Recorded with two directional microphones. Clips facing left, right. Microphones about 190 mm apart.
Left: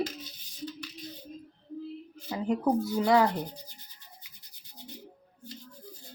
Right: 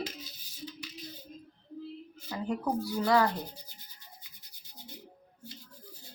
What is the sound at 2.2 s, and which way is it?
Speech, 20° left (ahead or behind).